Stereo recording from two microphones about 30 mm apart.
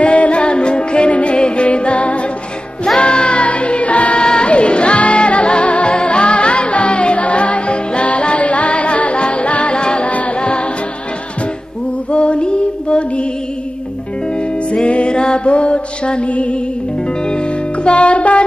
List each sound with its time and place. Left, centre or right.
0.0 s music: left
4.2 s singing: left
4.5 s music: left
9.8 s music: left
10.0 s music: left
10.4 s music: left
12.1 s music: left
14.3 s music: left
17.2 s music: left